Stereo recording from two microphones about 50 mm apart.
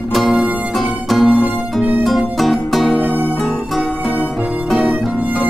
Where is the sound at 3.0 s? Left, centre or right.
Right.